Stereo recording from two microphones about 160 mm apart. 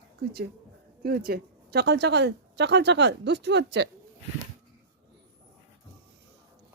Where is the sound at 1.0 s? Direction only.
75° right (ahead or behind).